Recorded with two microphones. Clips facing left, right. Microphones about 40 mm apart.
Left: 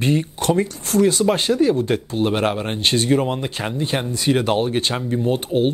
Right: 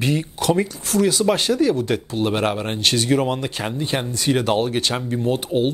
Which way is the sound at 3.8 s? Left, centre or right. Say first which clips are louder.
Left 2 dB; left.